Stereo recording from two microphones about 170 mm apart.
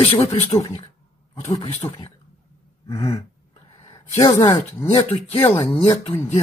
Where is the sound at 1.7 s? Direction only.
40° left (ahead or behind).